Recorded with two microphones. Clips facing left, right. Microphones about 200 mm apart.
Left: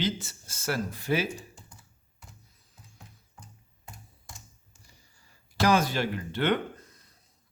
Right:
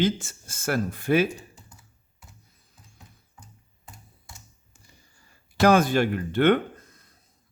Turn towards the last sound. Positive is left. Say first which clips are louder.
# right 7 dB
turn(degrees=-50)  # may be behind; listen again after turning